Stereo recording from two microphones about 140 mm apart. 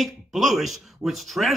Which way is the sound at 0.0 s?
Centre (ahead or behind).